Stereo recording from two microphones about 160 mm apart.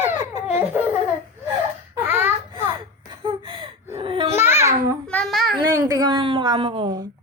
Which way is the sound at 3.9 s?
35° right (ahead or behind).